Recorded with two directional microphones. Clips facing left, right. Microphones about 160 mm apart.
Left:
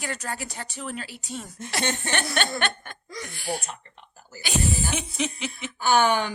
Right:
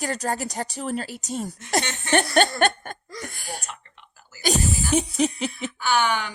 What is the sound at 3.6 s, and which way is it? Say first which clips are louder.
Speech: left 1 dB; 40° left (ahead or behind).